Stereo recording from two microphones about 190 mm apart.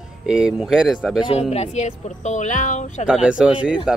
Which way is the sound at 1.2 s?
30° left (ahead or behind).